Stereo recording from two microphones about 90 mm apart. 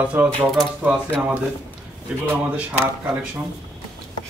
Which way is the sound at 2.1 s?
10° right (ahead or behind).